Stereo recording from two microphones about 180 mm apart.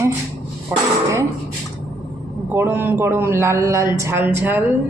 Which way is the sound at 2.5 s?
10° right (ahead or behind).